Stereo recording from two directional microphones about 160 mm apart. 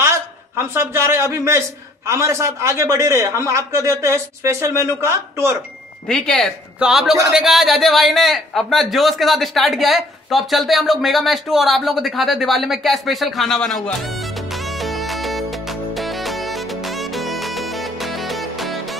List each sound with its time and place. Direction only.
0.6 s a man's voice: 15° right (ahead or behind)
6.0 s a man's voice: 5° left (ahead or behind)
14.5 s music: centre (ahead or behind)